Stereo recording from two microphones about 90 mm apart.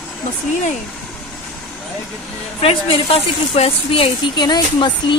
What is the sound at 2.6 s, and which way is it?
Speech, 90° left.